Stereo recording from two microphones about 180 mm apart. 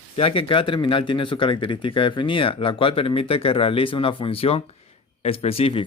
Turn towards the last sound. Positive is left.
turn(degrees=30)  # may be behind; listen again after turning